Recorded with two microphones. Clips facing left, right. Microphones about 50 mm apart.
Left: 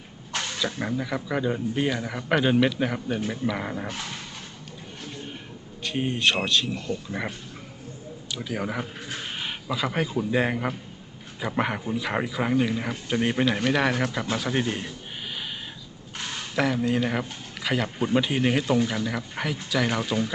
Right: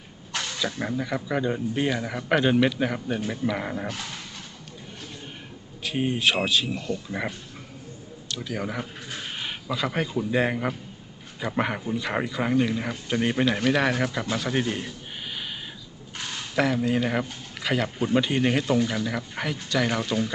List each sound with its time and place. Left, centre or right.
0.6 s speech: centre
5.8 s speech: centre
8.3 s speech: centre
16.6 s speech: centre